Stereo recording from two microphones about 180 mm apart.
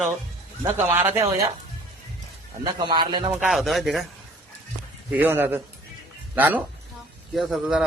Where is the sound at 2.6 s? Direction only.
25° right (ahead or behind).